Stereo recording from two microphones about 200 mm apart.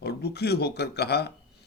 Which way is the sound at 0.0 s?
55° left (ahead or behind).